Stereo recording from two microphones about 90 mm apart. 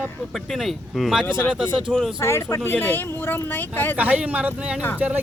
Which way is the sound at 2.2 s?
30° left (ahead or behind).